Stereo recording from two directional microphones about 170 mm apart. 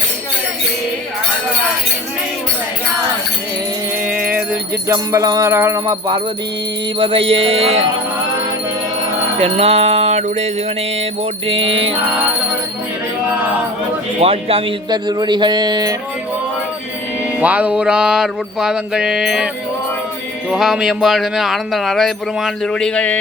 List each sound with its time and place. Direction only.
4.2 s wind chime: 10° right (ahead or behind)
4.9 s speech: 20° right (ahead or behind)
7.0 s music: 30° right (ahead or behind)
9.4 s music: 40° right (ahead or behind)
14.2 s speech: 35° right (ahead or behind)
17.4 s speech: 10° right (ahead or behind)
20.5 s speech: 5° right (ahead or behind)